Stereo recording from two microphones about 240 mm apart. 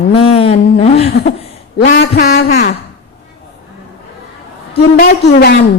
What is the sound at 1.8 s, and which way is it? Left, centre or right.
Speech, left.